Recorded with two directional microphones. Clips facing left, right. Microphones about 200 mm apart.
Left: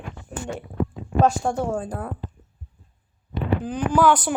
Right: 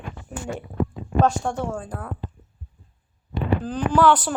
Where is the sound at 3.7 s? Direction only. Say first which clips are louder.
Even; 10° left (ahead or behind).